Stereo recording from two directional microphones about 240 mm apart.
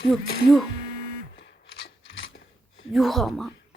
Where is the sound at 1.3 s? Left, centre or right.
Left.